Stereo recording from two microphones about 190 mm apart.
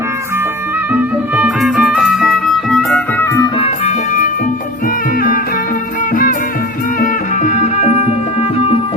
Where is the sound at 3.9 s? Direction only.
45° left (ahead or behind).